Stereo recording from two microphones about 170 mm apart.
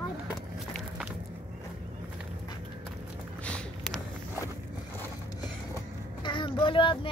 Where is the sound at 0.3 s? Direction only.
5° right (ahead or behind).